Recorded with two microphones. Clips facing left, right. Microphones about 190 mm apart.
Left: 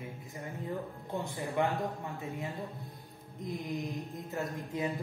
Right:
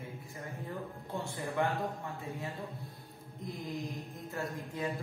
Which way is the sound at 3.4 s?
20° left (ahead or behind).